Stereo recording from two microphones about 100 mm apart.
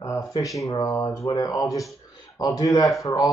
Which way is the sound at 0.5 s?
35° left (ahead or behind).